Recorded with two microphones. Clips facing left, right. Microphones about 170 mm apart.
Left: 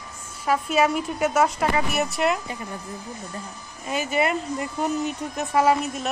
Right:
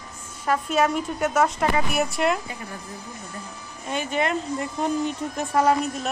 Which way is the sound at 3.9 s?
5° left (ahead or behind).